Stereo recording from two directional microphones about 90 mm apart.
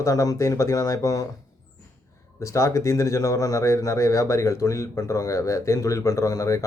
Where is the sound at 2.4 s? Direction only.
35° left (ahead or behind).